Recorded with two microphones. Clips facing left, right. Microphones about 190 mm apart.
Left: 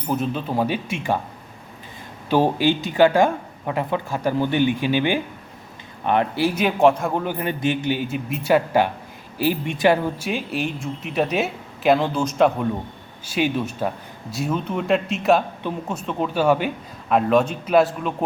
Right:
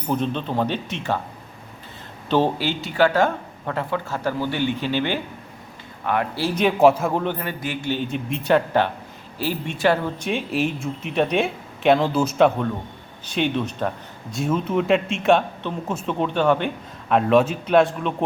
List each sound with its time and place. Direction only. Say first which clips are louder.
0.1 s speech: even; 5° left (ahead or behind)
2.3 s speech: left 2 dB; 15° left (ahead or behind)
6.5 s speech: right 3 dB; 5° left (ahead or behind)
7.3 s speech: left 5 dB; 20° left (ahead or behind); by 12.5 s 5° right (ahead or behind)
13.2 s speech: left 1 dB; 5° left (ahead or behind)